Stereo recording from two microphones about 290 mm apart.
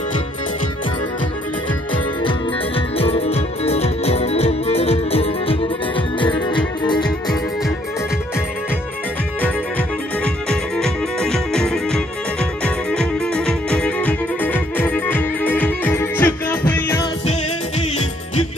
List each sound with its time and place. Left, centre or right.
3.0 s music: centre
9.4 s music: centre
17.3 s music: left